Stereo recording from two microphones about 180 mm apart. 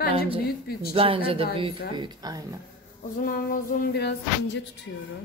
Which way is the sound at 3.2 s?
50° left (ahead or behind).